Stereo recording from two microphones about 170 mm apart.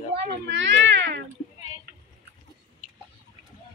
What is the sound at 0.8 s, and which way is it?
Cat, 90° right.